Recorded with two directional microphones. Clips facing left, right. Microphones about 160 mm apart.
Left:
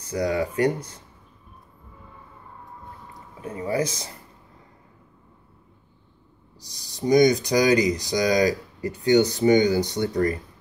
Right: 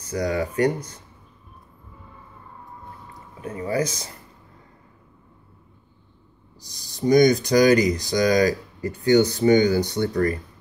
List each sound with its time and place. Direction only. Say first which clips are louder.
0.1 s speech: even; 25° left (ahead or behind)
3.3 s speech: right 1 dB; 30° left (ahead or behind)
7.0 s speech: right 1 dB; 15° left (ahead or behind)